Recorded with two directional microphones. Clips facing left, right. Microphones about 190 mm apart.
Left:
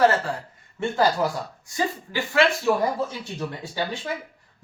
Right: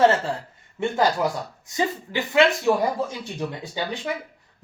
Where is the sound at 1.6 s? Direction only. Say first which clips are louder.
Right 2 dB; 20° right (ahead or behind).